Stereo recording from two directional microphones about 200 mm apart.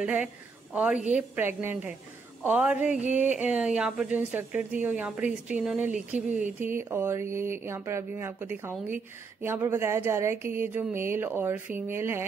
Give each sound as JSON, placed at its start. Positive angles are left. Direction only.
{"t": 0.0, "sound": "a woman's voice", "side_deg": -5}
{"t": 6.1, "sound": "a sound", "side_deg": -40}
{"t": 6.6, "sound": "speech", "side_deg": -10}